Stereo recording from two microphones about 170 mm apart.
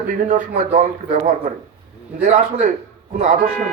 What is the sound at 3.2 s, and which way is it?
Speech, 50° right (ahead or behind).